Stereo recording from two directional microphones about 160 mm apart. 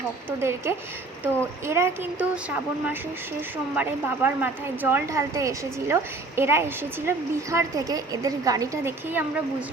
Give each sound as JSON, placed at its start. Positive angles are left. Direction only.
{"t": 0.3, "sound": "a woman's voice", "side_deg": -15}